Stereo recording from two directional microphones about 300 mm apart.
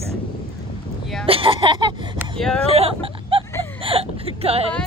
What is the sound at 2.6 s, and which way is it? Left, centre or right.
Speech, centre.